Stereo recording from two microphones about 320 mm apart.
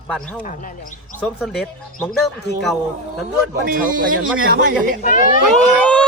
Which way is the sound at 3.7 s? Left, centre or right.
Right.